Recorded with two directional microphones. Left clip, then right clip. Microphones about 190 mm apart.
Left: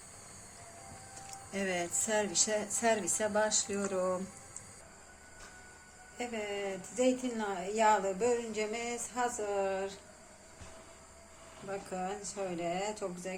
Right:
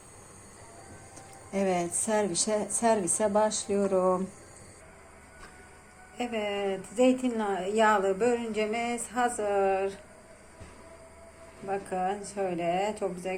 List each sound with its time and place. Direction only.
1.5 s a woman's voice: 15° right (ahead or behind)
6.1 s a woman's voice: 10° right (ahead or behind)
11.7 s speech: 5° right (ahead or behind)